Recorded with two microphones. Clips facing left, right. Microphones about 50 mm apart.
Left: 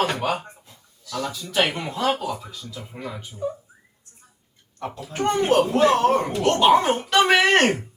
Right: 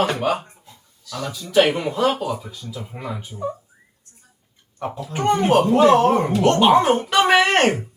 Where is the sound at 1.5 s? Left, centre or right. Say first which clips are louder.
Right 7 dB; centre.